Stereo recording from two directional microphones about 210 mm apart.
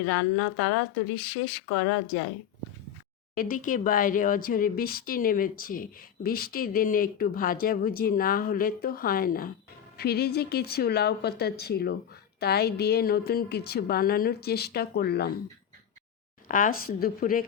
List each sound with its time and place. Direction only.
0.1 s a woman's voice: 80° left
3.3 s speech: 40° left (ahead or behind)
16.5 s speech: 40° left (ahead or behind)